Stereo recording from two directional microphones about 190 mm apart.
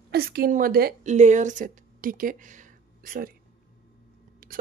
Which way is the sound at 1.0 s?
40° right (ahead or behind).